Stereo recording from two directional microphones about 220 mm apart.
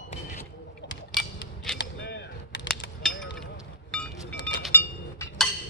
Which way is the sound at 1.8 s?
55° left (ahead or behind).